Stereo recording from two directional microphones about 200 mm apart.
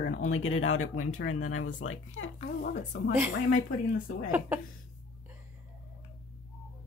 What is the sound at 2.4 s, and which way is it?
Speech, 35° left (ahead or behind).